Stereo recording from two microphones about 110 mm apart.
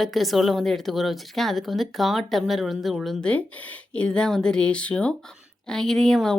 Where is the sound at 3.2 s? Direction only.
10° left (ahead or behind).